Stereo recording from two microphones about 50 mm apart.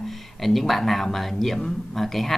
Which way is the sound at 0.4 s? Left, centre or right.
Centre.